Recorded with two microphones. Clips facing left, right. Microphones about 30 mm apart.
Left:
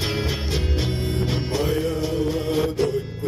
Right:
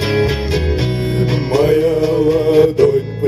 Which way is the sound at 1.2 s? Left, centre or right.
Right.